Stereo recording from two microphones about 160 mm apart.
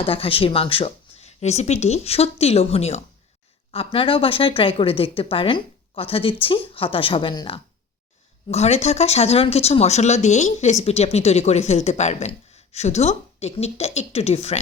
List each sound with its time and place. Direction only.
0.0 s speech: 35° left (ahead or behind)
8.4 s speech: 40° left (ahead or behind)